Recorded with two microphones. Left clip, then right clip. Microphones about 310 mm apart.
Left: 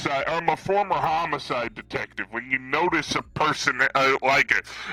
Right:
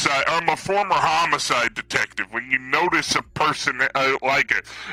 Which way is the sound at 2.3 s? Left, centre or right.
Centre.